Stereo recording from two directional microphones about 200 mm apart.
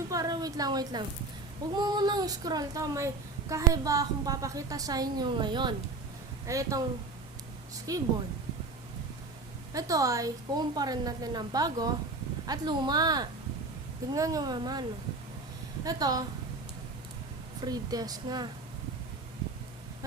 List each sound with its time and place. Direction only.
0.1 s a sound: 20° right (ahead or behind)
1.7 s a woman's voice: 20° right (ahead or behind)
7.9 s a woman's voice: 15° right (ahead or behind)
9.7 s a woman's voice: 15° right (ahead or behind)
17.6 s a woman's voice: 20° right (ahead or behind)